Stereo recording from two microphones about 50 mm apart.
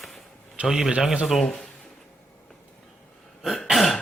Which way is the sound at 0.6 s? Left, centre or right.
Centre.